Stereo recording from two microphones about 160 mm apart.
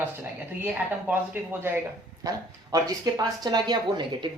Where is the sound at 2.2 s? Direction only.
25° right (ahead or behind).